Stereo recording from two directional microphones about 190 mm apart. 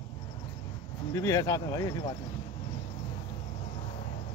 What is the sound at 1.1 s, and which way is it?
Speech, 15° left (ahead or behind).